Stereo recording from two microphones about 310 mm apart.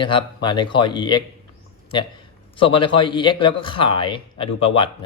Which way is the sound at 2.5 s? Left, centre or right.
Centre.